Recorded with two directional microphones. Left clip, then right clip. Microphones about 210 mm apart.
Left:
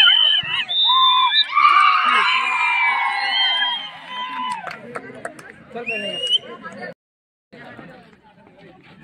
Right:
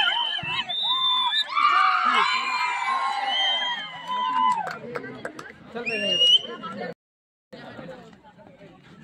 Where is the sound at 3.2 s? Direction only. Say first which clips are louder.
Left 5 dB; 35° right (ahead or behind).